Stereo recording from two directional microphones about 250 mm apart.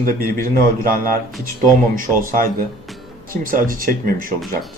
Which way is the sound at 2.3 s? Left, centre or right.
Right.